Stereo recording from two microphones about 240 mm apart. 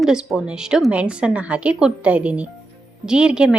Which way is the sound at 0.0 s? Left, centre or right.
Centre.